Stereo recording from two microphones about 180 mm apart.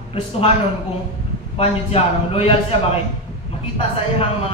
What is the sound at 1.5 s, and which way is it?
A man's voice, 35° left (ahead or behind).